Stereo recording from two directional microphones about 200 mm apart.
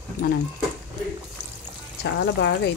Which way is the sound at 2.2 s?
60° left (ahead or behind).